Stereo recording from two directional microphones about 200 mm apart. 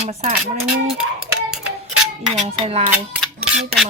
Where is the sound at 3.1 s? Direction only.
Centre (ahead or behind).